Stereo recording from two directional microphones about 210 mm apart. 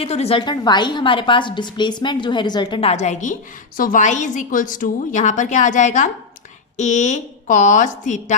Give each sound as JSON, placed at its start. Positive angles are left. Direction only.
{"t": 0.0, "sound": "a woman's voice", "side_deg": 30}